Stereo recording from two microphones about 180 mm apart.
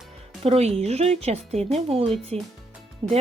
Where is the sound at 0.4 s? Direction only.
35° right (ahead or behind).